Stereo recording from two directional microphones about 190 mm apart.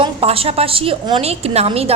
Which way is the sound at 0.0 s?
30° right (ahead or behind).